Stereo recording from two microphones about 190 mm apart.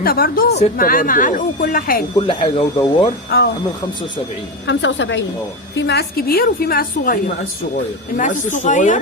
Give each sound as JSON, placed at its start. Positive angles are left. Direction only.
{"t": 0.0, "sound": "speech", "side_deg": 50}
{"t": 2.1, "sound": "speech", "side_deg": 30}
{"t": 3.2, "sound": "speech", "side_deg": 55}
{"t": 4.6, "sound": "a woman's voice", "side_deg": 70}
{"t": 5.7, "sound": "speech", "side_deg": 65}